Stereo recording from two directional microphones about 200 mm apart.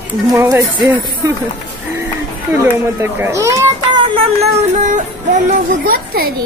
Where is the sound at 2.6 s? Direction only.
10° right (ahead or behind); by 6.3 s 45° right (ahead or behind).